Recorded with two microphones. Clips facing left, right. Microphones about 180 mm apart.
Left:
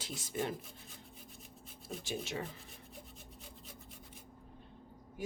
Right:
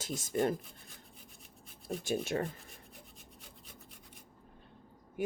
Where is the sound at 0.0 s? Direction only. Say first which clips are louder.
Right 6 dB; 45° right (ahead or behind).